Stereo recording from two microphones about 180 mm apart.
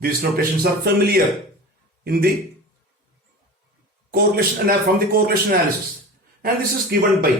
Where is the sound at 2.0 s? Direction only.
60° right (ahead or behind).